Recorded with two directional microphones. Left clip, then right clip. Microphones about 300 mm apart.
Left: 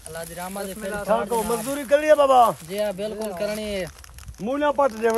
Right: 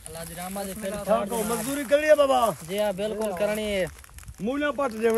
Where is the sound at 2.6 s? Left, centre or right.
Centre.